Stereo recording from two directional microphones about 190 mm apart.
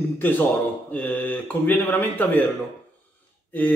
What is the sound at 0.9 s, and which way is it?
Speech, 10° left (ahead or behind).